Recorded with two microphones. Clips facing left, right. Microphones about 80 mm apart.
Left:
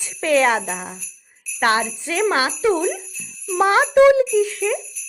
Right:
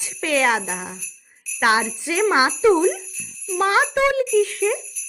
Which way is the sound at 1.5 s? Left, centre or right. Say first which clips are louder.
Even; centre.